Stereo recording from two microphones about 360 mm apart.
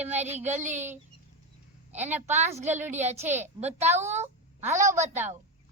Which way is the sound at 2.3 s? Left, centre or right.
Centre.